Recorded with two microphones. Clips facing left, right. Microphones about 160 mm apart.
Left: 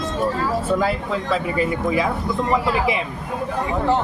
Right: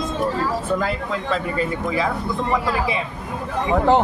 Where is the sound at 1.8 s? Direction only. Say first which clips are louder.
Left 2 dB; 15° left (ahead or behind).